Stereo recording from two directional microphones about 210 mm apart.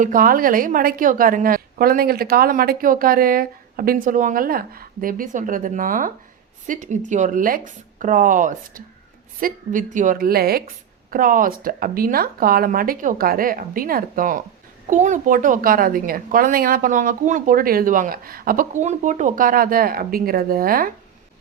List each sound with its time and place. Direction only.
0.0 s a woman's voice: 40° right (ahead or behind)